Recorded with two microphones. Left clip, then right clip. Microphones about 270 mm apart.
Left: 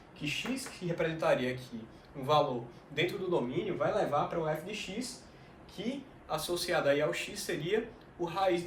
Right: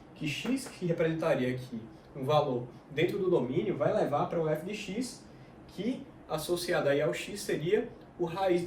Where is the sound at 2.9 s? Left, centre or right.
Centre.